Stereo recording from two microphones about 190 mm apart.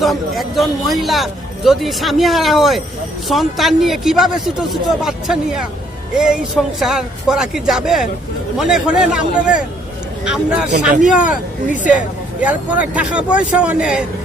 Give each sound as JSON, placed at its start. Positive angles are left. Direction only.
{"t": 0.0, "sound": "speech", "side_deg": 0}
{"t": 11.2, "sound": "speech", "side_deg": 45}
{"t": 12.4, "sound": "speech", "side_deg": -5}